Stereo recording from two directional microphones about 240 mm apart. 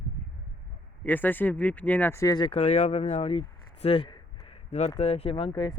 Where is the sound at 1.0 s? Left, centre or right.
Centre.